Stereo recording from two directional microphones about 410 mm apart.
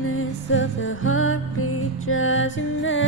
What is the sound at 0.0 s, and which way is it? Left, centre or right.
Music, left.